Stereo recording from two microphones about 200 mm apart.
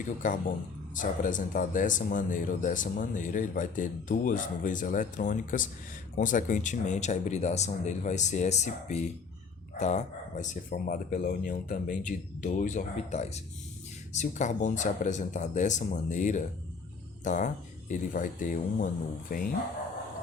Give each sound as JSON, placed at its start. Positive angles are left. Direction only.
{"t": 0.0, "sound": "speech", "side_deg": 40}